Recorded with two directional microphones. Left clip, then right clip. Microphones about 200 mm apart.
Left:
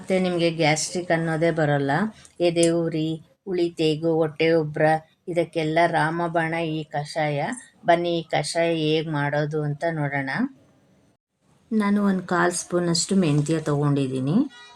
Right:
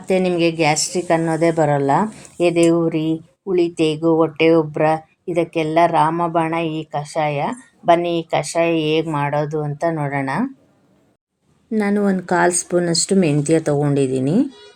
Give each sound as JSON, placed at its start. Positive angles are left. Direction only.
{"t": 0.0, "sound": "speech", "side_deg": -10}
{"t": 11.7, "sound": "speech", "side_deg": -15}